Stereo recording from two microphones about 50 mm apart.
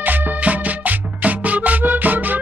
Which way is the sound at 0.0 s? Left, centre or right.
Right.